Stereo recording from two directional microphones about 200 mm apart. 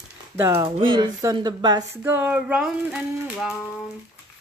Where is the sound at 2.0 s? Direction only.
10° right (ahead or behind).